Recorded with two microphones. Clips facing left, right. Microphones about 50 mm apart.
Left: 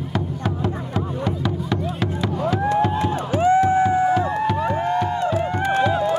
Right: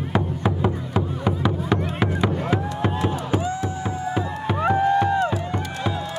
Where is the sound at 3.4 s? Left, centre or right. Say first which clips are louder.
Left 11 dB; left.